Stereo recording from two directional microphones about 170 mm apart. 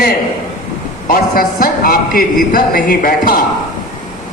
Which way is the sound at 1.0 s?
55° left (ahead or behind).